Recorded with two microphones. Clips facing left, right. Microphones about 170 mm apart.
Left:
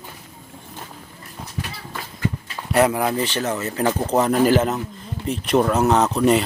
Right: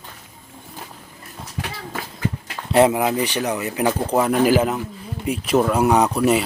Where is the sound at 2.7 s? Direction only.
25° right (ahead or behind); by 6.4 s 5° right (ahead or behind).